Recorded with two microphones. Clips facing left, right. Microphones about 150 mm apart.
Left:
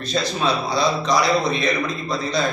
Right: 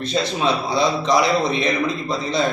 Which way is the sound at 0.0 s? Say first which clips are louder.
Right 1 dB; 25° right (ahead or behind).